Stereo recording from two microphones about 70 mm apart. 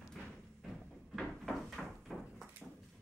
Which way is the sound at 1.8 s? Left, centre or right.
Centre.